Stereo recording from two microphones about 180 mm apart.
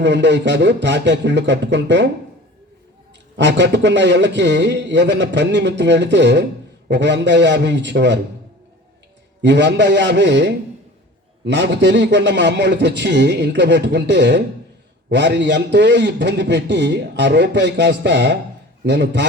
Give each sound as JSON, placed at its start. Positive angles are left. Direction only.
{"t": 0.0, "sound": "a man's voice", "side_deg": -80}
{"t": 3.3, "sound": "a man's voice", "side_deg": -75}
{"t": 9.4, "sound": "a man's voice", "side_deg": -75}